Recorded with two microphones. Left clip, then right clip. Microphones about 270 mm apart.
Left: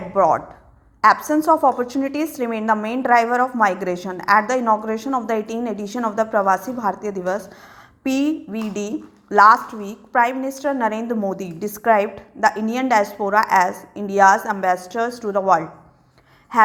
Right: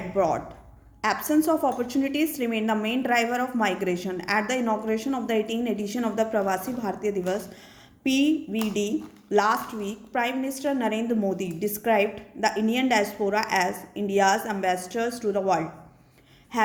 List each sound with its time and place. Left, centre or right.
1.0 s a woman's voice: centre
8.0 s a woman's voice: left
9.3 s a woman's voice: centre